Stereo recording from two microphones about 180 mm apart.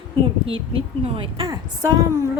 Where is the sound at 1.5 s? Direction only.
20° right (ahead or behind).